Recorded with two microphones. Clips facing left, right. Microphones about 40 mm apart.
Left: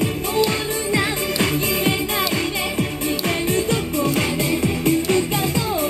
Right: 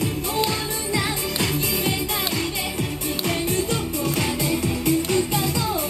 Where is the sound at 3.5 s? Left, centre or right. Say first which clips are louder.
Left 3 dB; left.